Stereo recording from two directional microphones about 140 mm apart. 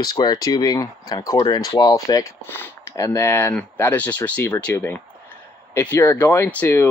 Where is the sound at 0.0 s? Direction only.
30° left (ahead or behind).